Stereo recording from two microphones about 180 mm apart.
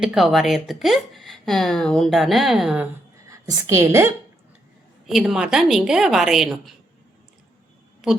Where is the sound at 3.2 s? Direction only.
15° right (ahead or behind).